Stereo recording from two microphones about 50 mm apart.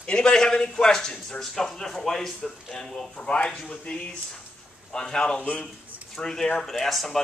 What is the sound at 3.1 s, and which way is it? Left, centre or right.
Speech, left.